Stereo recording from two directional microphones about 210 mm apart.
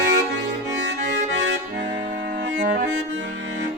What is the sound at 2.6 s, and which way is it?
Music, 45° right (ahead or behind).